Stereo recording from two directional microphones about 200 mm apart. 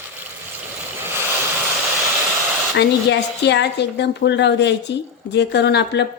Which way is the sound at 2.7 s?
60° left (ahead or behind).